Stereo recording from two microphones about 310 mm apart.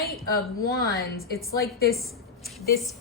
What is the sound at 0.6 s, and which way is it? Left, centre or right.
A woman's voice, left.